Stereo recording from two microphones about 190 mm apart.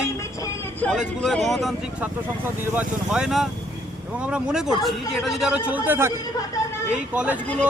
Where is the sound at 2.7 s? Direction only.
5° right (ahead or behind).